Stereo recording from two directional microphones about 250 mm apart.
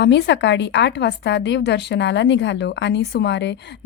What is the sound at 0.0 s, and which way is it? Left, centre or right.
A woman's voice, left.